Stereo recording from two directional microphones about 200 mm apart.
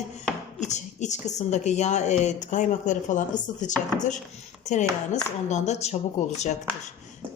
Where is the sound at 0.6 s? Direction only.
35° left (ahead or behind).